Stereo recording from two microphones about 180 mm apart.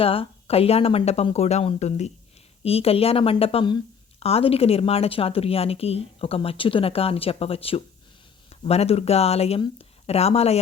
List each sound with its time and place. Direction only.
0.0 s a woman's voice: 30° left (ahead or behind)